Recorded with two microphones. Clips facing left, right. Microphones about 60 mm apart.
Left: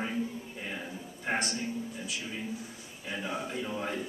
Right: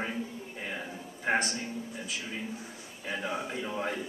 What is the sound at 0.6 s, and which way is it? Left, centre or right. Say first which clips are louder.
A man's voice: right 3 dB; centre.